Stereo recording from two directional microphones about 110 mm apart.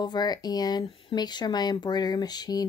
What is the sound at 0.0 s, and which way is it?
Speech, 40° left (ahead or behind).